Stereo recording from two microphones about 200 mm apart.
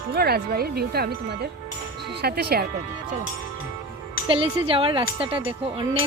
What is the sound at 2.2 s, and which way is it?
Speech, 50° right (ahead or behind).